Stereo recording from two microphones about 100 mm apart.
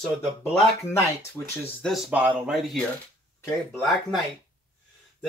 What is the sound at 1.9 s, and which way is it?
Speech, 5° right (ahead or behind).